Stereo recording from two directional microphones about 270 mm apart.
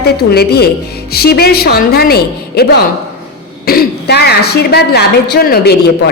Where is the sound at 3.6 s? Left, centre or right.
Left.